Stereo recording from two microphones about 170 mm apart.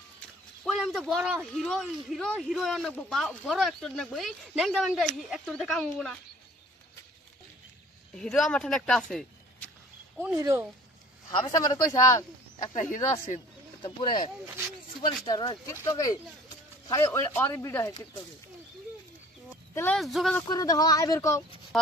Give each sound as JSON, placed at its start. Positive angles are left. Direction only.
{"t": 0.7, "sound": "a man's voice", "side_deg": 0}
{"t": 8.2, "sound": "speech", "side_deg": 5}
{"t": 10.4, "sound": "speech", "side_deg": -15}
{"t": 11.3, "sound": "speech", "side_deg": 20}
{"t": 12.7, "sound": "speech", "side_deg": 50}
{"t": 15.0, "sound": "speech", "side_deg": 25}
{"t": 19.7, "sound": "speech", "side_deg": 15}
{"t": 20.0, "sound": "a man's voice", "side_deg": 0}
{"t": 20.4, "sound": "speech", "side_deg": 20}